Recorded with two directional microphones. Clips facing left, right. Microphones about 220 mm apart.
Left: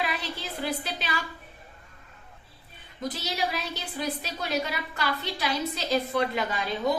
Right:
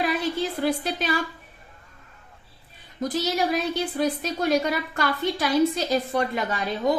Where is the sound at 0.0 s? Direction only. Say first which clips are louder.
Right 8 dB; 50° right (ahead or behind).